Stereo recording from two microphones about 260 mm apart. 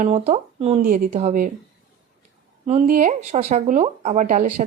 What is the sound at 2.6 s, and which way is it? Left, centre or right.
Speech, right.